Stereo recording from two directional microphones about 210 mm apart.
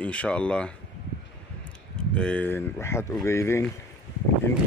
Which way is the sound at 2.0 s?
5° left (ahead or behind).